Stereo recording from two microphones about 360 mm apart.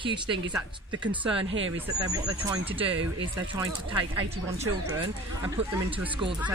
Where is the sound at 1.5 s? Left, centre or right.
Right.